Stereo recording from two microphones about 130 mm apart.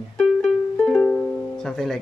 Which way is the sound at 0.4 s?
5° left (ahead or behind).